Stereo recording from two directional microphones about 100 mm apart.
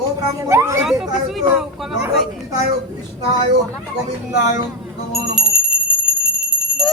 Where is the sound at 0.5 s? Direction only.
25° right (ahead or behind).